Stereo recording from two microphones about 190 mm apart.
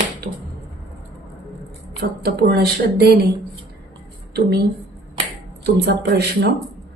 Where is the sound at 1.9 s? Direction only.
60° right (ahead or behind).